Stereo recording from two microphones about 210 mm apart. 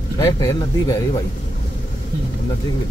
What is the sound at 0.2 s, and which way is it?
Speech, 15° left (ahead or behind).